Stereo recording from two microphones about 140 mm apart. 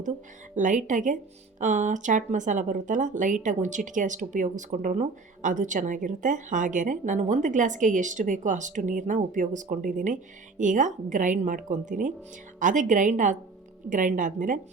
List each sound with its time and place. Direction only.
0.5 s a woman's voice: 65° right (ahead or behind)